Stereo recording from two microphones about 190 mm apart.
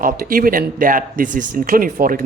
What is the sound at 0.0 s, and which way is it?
Speech, 50° right (ahead or behind).